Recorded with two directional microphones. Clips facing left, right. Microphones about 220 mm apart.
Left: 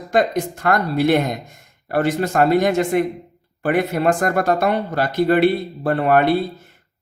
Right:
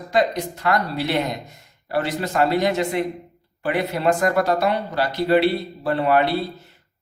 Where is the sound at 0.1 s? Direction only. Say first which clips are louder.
Left 2 dB; 50° left (ahead or behind).